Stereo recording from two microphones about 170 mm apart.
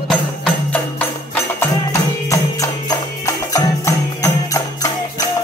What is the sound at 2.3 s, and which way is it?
Music, 20° left (ahead or behind).